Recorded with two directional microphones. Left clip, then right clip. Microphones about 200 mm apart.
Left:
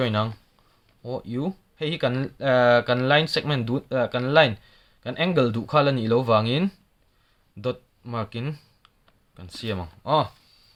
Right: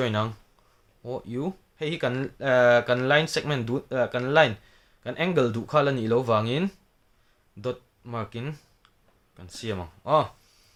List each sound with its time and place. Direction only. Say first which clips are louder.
0.0 s speech: left 2 dB; 15° left (ahead or behind)